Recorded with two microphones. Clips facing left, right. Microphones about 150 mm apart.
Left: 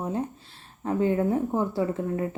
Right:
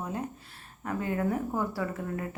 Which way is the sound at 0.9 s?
25° left (ahead or behind).